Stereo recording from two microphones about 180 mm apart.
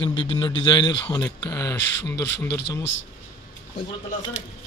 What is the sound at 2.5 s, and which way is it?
Speech, 65° left (ahead or behind).